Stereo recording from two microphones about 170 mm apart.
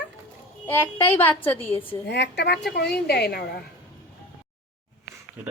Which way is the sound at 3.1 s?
70° left (ahead or behind).